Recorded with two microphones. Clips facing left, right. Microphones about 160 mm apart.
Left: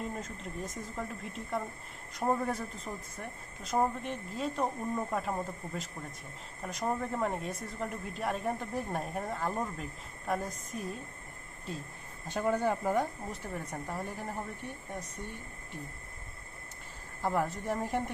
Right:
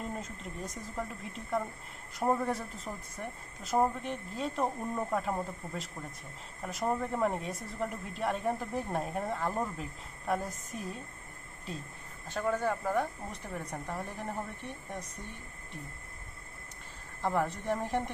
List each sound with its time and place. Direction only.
0.2 s a woman's voice: centre (ahead or behind)
12.3 s speech: 15° left (ahead or behind)
13.3 s a woman's voice: centre (ahead or behind)
17.2 s a woman's voice: centre (ahead or behind)